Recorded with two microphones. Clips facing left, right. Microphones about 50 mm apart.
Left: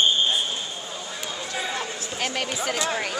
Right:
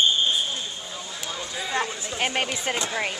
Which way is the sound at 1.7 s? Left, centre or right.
Right.